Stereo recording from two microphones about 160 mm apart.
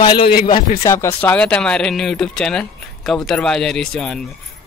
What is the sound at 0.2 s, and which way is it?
Speech, 70° left (ahead or behind).